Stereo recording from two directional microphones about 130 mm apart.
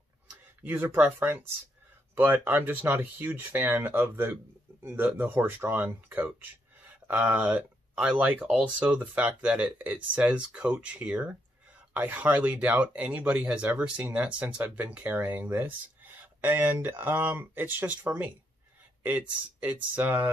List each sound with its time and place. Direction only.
0.7 s speech: 15° right (ahead or behind)